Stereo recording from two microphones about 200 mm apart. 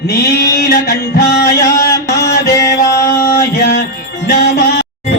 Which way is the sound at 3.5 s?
50° left (ahead or behind).